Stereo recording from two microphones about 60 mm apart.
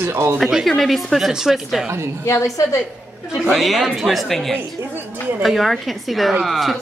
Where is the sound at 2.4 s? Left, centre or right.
Left.